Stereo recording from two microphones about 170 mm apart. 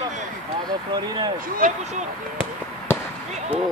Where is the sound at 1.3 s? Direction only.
55° right (ahead or behind).